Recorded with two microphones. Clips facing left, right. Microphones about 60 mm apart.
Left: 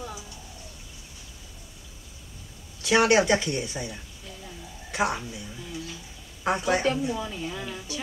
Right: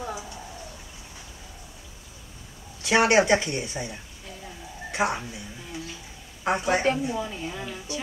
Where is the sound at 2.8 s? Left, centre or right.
Centre.